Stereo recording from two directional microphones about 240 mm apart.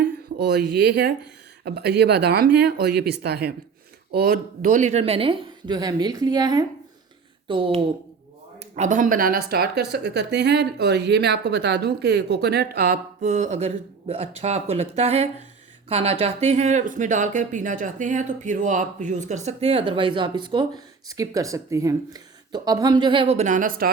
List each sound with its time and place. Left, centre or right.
0.3 s speech: right